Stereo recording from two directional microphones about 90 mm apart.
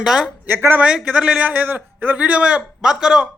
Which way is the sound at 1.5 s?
20° right (ahead or behind).